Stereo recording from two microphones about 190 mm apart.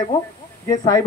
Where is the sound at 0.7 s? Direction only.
15° left (ahead or behind).